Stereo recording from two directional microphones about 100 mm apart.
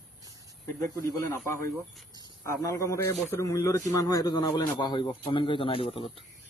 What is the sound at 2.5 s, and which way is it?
A man's voice, 30° left (ahead or behind).